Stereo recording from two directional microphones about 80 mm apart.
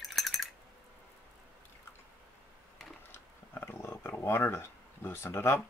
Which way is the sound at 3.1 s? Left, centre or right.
Left.